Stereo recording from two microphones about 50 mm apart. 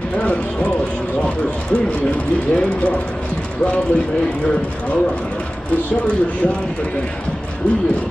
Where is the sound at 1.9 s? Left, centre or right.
Left.